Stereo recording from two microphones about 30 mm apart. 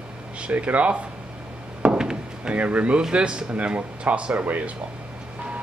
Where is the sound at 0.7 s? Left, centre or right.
Right.